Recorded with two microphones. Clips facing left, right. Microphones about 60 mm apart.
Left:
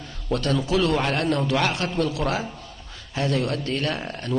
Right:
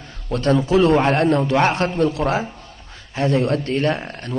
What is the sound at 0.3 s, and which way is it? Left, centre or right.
A man's voice, right.